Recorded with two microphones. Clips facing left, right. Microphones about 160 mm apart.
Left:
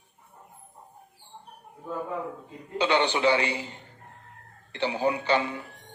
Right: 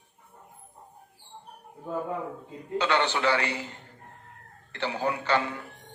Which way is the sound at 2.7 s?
20° left (ahead or behind).